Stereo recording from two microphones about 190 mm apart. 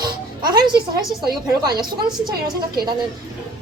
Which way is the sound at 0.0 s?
25° right (ahead or behind).